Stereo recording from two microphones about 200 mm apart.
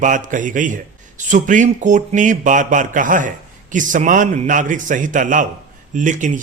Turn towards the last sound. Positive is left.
turn(degrees=-40)  # may be behind; listen again after turning